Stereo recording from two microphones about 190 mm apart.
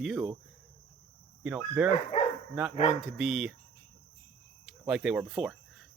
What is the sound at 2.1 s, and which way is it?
Dog, 35° left (ahead or behind).